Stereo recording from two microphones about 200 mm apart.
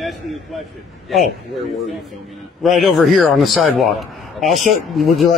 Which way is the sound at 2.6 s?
Centre (ahead or behind).